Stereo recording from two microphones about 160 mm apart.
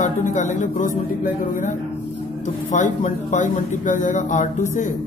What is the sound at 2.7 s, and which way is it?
Speech, 50° left (ahead or behind).